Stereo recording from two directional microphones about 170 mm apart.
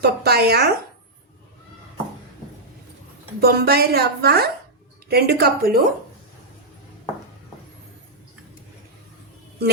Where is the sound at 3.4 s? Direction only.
65° right (ahead or behind).